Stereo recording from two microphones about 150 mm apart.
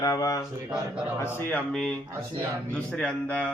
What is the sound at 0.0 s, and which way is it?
Speech, 25° left (ahead or behind).